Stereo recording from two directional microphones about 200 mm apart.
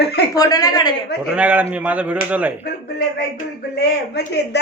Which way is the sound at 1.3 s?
5° right (ahead or behind).